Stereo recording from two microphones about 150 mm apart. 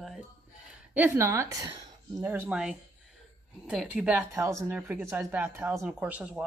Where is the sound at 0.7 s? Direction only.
10° right (ahead or behind).